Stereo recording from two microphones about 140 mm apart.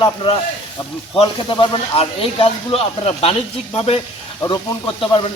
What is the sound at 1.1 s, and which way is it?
Speech, 35° left (ahead or behind).